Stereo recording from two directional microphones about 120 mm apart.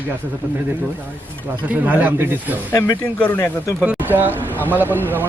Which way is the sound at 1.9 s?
15° right (ahead or behind).